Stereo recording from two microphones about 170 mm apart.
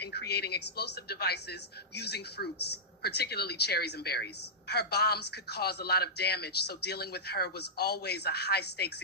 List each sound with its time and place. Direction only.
0.0 s a woman's voice: 70° left (ahead or behind)